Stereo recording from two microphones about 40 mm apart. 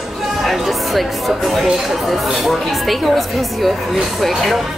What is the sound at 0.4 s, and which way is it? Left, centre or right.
Speech, centre.